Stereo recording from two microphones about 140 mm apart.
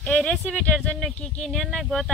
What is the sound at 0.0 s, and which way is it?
Speech, 5° left (ahead or behind).